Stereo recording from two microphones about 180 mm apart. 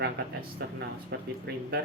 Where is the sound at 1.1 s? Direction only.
70° right (ahead or behind).